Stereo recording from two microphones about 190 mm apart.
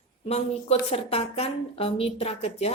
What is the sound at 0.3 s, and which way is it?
A woman's voice, 30° left (ahead or behind).